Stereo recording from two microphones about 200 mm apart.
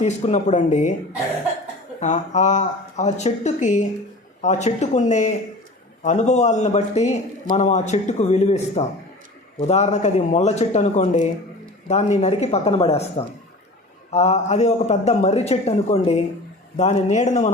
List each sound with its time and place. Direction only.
0.0 s a man's voice: 35° left (ahead or behind)
2.0 s a man's voice: 35° left (ahead or behind)